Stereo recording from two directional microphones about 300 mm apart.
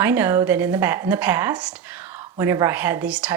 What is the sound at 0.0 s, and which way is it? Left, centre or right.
Speech, centre.